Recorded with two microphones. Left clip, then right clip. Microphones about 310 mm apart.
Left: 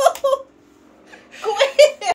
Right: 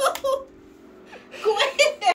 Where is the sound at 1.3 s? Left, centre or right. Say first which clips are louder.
Left 5 dB; centre.